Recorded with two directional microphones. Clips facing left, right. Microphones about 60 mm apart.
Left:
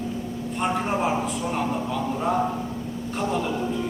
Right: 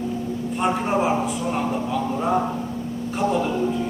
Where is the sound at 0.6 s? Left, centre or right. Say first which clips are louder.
Right 3 dB; centre.